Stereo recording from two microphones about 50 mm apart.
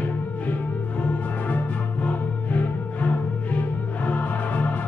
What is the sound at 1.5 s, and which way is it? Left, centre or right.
Music, left.